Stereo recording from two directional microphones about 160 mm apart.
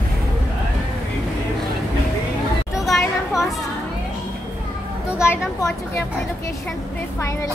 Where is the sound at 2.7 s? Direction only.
Centre (ahead or behind).